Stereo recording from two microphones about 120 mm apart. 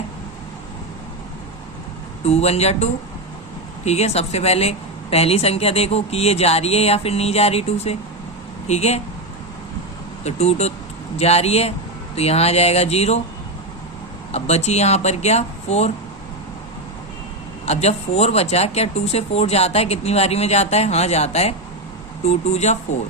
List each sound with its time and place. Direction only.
2.2 s a woman's voice: 60° left (ahead or behind)
10.2 s a woman's voice: 65° left (ahead or behind)
14.3 s a woman's voice: 65° left (ahead or behind)
17.7 s a woman's voice: 65° left (ahead or behind)